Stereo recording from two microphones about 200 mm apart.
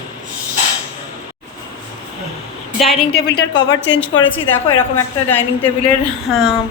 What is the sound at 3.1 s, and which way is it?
Speech, 60° left (ahead or behind).